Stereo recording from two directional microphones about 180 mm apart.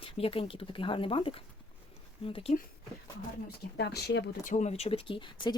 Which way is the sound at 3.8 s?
65° left (ahead or behind).